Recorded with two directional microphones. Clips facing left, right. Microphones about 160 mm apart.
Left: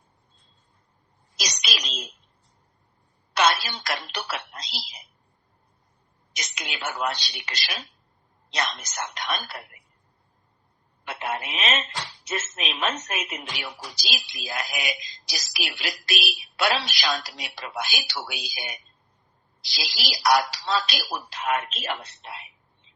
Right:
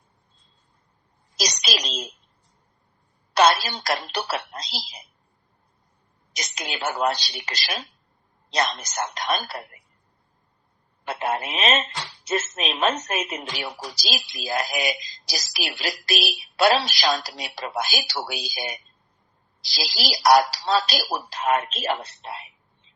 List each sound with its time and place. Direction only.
1.4 s a sound: 35° right (ahead or behind)
3.3 s speech: 35° right (ahead or behind)
6.3 s a woman's voice: 35° right (ahead or behind)
11.0 s a woman's voice: 40° right (ahead or behind)